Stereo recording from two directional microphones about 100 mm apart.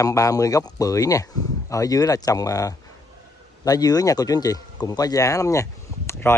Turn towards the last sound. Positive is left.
turn(degrees=30)  # may be behind; listen again after turning